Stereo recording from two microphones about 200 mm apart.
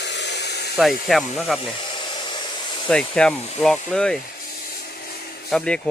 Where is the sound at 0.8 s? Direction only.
Centre (ahead or behind).